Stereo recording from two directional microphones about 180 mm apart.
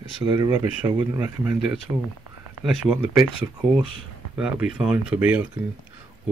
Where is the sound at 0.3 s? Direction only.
20° right (ahead or behind); by 3.3 s 5° right (ahead or behind).